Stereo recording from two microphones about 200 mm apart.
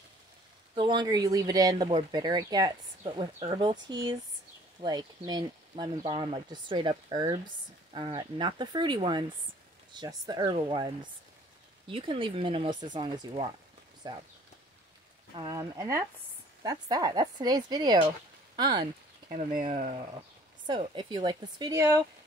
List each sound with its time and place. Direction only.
0.7 s speech: 25° right (ahead or behind)
15.3 s speech: 20° right (ahead or behind)
19.2 s speech: 45° right (ahead or behind); by 22.0 s 15° right (ahead or behind)